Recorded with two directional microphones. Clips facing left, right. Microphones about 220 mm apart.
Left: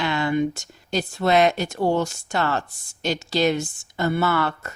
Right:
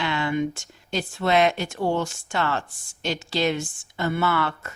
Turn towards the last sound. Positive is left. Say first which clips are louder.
# left 2 dB
turn(degrees=40)  # may be behind; listen again after turning